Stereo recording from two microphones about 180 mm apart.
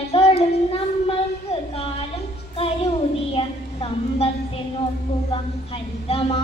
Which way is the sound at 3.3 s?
30° left (ahead or behind).